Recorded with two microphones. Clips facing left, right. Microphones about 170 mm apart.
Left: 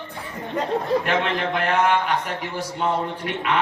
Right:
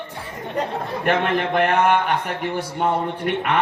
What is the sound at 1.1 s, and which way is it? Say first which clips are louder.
A man's voice: right 3 dB; 55° right (ahead or behind).